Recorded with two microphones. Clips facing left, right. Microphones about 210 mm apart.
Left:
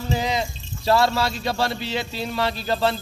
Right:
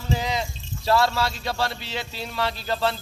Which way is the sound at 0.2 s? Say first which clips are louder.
Left 3 dB; 20° left (ahead or behind).